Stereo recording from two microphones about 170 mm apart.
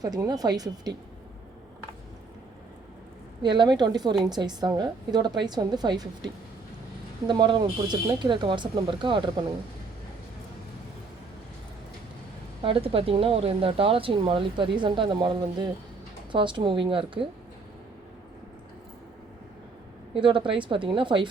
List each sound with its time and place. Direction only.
0.0 s a woman's voice: 20° right (ahead or behind)
3.4 s a woman's voice: 25° right (ahead or behind)
12.6 s a woman's voice: 35° right (ahead or behind)
20.1 s a woman's voice: 30° right (ahead or behind)